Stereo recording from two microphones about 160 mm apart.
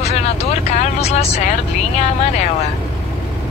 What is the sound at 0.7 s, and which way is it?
Vehicle, 40° left (ahead or behind).